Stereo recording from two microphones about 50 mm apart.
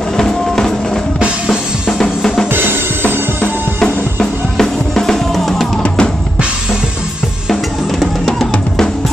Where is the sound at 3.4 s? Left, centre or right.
Right.